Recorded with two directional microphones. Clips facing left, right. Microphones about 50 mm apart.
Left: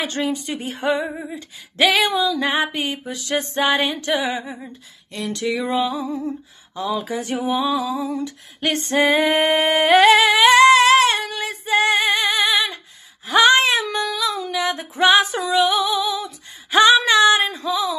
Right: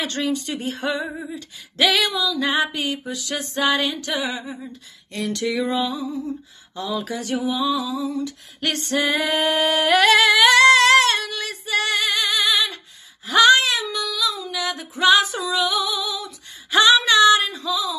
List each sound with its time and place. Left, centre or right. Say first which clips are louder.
0.0 s speech: left 1 dB; centre
0.8 s singing: left 6 dB; left
3.1 s female singing: left 4 dB; left
5.4 s music: left 1 dB; centre
5.9 s female singing: left 2 dB; left
6.7 s speech: left 3 dB; centre
7.1 s female singing: left 2 dB; left
8.5 s singing: left 4 dB; left
11.1 s female singing: left 2 dB; left
13.3 s a sound: left 1 dB; left
13.8 s female singing: left 2 dB; left
15.9 s singing: left 5 dB; left
16.7 s female singing: left 2 dB; left